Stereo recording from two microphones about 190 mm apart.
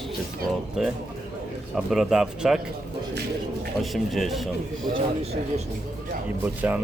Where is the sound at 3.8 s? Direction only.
Centre (ahead or behind).